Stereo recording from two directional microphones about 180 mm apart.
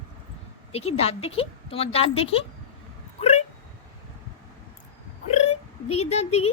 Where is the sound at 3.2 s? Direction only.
40° left (ahead or behind).